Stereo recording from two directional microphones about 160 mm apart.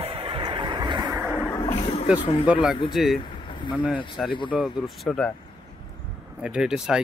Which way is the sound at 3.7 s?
5° right (ahead or behind).